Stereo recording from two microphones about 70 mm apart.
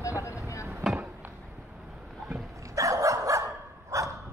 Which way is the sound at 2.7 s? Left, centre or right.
Right.